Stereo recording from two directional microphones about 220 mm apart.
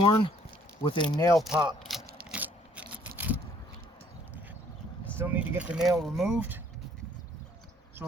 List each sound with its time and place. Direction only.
0.0 s speech: 25° left (ahead or behind)
1.8 s a sound: centre (ahead or behind)
3.2 s scrape: 5° right (ahead or behind)
5.1 s speech: 10° right (ahead or behind)